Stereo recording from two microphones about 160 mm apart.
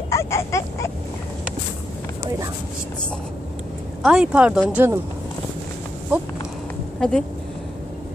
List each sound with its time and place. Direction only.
0.1 s a sound: 15° left (ahead or behind)
4.0 s speech: 5° right (ahead or behind)
6.1 s speech: 10° right (ahead or behind)
7.0 s speech: 5° left (ahead or behind)